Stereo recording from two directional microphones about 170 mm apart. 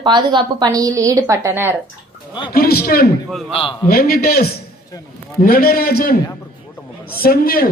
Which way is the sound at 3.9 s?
60° left (ahead or behind).